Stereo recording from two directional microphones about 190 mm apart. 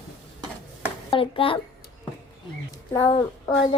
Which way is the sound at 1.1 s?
30° left (ahead or behind).